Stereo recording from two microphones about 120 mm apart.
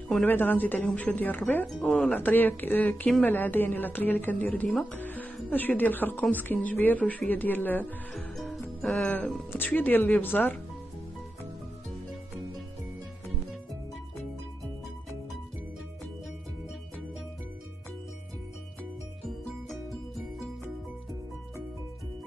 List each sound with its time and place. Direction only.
0.1 s speech: 15° left (ahead or behind)
8.4 s music: 5° left (ahead or behind)
8.9 s speech: 15° left (ahead or behind)